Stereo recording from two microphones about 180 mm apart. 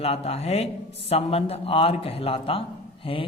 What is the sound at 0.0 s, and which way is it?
Speech, 35° left (ahead or behind).